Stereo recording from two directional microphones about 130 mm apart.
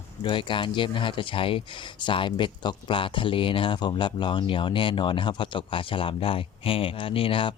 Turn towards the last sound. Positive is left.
turn(degrees=45)  # may be behind; listen again after turning